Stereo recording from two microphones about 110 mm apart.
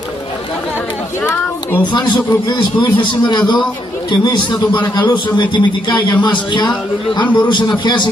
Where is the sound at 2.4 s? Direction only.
45° left (ahead or behind).